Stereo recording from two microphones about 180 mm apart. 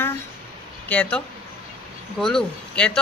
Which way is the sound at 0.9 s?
5° left (ahead or behind).